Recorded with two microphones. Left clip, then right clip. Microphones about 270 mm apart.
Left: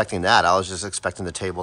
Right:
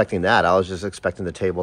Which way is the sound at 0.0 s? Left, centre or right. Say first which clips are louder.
Even; centre.